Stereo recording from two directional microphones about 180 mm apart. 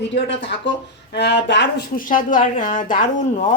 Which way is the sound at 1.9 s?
50° left (ahead or behind).